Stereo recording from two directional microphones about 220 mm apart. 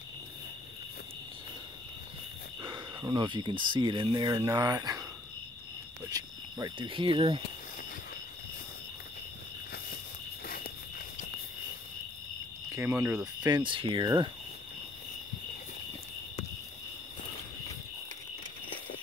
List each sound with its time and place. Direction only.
2.6 s speech: 20° right (ahead or behind)
6.0 s speech: 15° right (ahead or behind)
10.4 s walk: 40° left (ahead or behind)
12.7 s speech: 10° right (ahead or behind)